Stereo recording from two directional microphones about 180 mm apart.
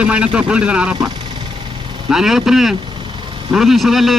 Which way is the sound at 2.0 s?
Centre (ahead or behind).